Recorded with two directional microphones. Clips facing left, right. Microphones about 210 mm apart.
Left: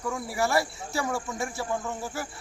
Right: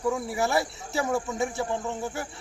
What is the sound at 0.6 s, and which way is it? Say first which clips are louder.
Speech: right 2 dB; 20° right (ahead or behind).